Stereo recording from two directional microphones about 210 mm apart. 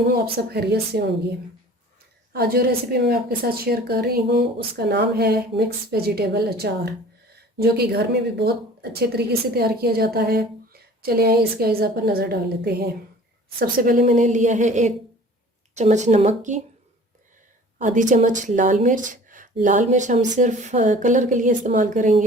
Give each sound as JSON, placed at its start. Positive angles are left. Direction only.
{"t": 0.3, "sound": "speech", "side_deg": -50}
{"t": 2.3, "sound": "speech", "side_deg": -45}
{"t": 17.8, "sound": "speech", "side_deg": -35}